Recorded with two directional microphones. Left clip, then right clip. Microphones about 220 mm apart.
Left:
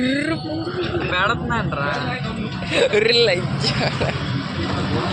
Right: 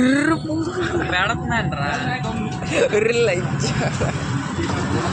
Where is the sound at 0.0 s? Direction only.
20° right (ahead or behind).